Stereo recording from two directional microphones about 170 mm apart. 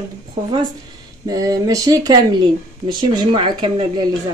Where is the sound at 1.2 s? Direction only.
20° right (ahead or behind).